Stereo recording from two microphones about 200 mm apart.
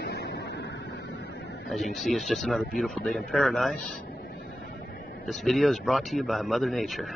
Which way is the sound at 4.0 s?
55° left (ahead or behind).